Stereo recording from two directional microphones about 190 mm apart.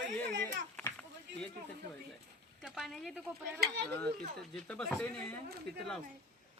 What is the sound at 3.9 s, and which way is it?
Speech, 5° left (ahead or behind).